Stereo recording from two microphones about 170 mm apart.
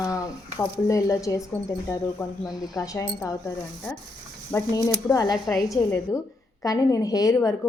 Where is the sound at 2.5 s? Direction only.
20° left (ahead or behind).